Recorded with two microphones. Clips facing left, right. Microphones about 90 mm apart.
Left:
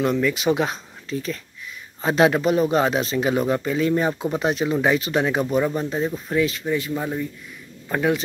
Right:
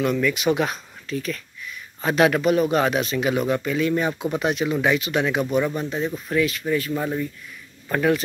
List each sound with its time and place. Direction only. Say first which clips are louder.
0.0 s speech: left 1 dB; 25° left (ahead or behind)
6.9 s speech: right 1 dB; 5° left (ahead or behind)